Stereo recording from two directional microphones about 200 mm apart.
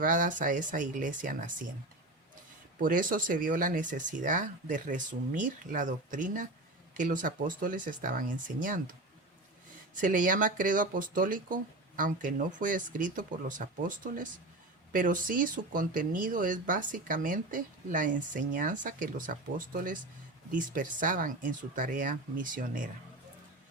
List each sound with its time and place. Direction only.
0.0 s speech: 40° right (ahead or behind)
2.7 s speech: 45° right (ahead or behind)
9.9 s speech: 40° right (ahead or behind)